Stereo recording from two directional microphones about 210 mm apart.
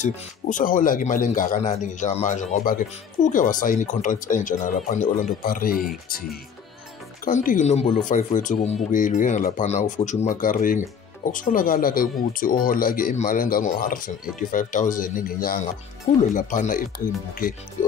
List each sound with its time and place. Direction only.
0.0 s speech: 40° left (ahead or behind)